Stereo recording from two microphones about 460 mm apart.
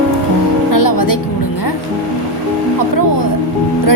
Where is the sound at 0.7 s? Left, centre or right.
Left.